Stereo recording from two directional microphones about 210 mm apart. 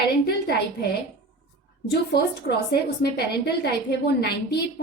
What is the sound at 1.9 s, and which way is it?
A woman's voice, 50° left (ahead or behind).